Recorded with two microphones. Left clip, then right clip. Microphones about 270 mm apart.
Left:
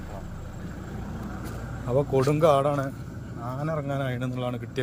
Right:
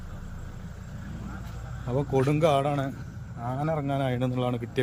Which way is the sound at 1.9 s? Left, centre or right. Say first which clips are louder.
Left 3 dB; centre.